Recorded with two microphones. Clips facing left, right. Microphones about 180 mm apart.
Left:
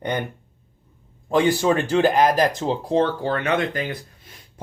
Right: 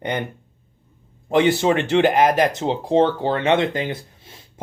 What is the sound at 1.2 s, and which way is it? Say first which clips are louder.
A man's voice: right 2 dB; 20° right (ahead or behind).